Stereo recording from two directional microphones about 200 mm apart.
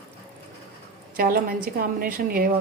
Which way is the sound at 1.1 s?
50° right (ahead or behind).